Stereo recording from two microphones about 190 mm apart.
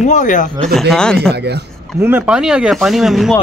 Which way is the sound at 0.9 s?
5° left (ahead or behind).